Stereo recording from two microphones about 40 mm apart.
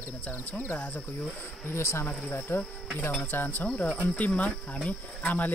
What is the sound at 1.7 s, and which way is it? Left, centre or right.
Speech, left.